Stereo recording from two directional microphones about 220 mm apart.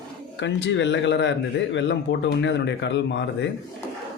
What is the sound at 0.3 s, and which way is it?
Speech, 55° left (ahead or behind).